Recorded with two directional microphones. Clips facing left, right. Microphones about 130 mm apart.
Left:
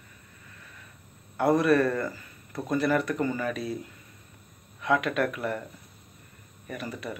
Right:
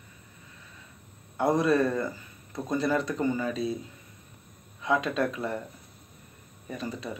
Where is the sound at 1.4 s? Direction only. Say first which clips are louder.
Left 2 dB; 15° right (ahead or behind).